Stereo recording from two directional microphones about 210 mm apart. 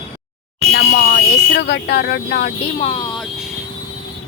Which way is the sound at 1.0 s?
45° left (ahead or behind).